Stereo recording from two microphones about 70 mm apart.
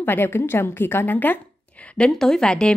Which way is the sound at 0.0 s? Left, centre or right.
Left.